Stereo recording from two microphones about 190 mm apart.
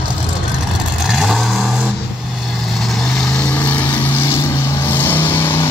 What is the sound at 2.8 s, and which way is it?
Vehicle, centre (ahead or behind).